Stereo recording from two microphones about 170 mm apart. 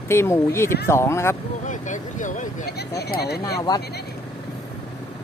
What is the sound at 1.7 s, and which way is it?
Vehicle, 45° left (ahead or behind).